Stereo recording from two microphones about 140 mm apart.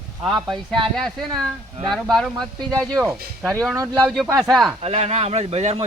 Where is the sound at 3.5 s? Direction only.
5° left (ahead or behind).